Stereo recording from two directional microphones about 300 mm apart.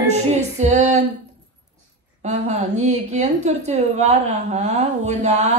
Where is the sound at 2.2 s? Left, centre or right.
Right.